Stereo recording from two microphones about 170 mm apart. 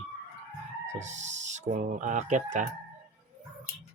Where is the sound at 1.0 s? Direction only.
45° right (ahead or behind).